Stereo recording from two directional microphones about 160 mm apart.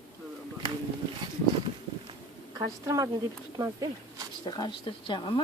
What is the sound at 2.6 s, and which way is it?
Speech, 20° right (ahead or behind).